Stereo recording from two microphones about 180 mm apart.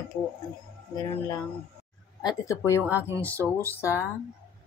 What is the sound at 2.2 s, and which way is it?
Speech, 15° left (ahead or behind).